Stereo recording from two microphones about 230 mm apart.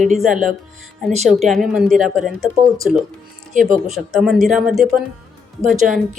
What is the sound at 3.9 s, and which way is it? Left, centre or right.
A woman's voice, centre.